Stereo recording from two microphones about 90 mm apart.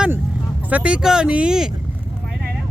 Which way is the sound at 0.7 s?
10° right (ahead or behind).